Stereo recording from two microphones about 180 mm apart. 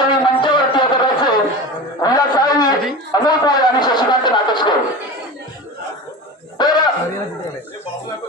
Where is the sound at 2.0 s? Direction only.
20° left (ahead or behind).